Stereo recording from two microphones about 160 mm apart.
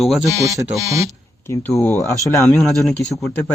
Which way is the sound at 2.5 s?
Centre (ahead or behind).